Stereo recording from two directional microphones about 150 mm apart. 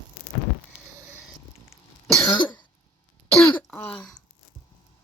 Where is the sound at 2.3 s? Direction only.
30° left (ahead or behind).